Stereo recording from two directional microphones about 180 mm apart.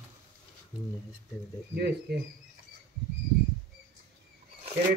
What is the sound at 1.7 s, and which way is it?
Speech, 65° right (ahead or behind).